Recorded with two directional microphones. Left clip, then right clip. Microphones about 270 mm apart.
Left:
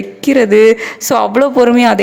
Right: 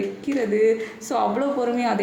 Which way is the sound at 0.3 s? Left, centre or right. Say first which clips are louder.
Left 13 dB; left.